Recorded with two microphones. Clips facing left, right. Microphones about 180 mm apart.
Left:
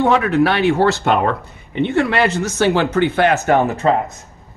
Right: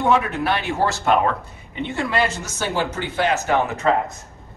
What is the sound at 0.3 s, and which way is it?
Speech, 90° left.